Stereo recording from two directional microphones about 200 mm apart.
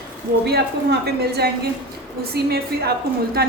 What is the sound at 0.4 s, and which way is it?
A woman's voice, 55° right (ahead or behind).